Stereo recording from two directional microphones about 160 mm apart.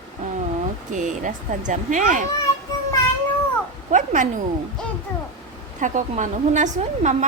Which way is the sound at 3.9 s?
50° right (ahead or behind).